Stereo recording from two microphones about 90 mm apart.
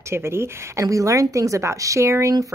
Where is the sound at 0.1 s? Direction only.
30° right (ahead or behind).